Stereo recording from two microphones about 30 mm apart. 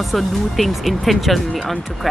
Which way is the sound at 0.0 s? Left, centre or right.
Centre.